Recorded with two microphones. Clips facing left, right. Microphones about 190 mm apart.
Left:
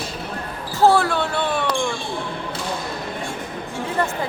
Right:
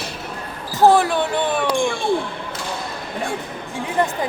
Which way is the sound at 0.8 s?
15° right (ahead or behind).